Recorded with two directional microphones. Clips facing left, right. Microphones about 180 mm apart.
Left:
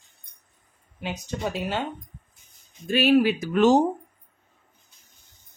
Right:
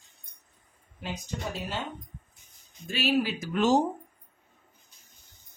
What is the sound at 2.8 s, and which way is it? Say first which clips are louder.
Speech: left 8 dB; 55° left (ahead or behind).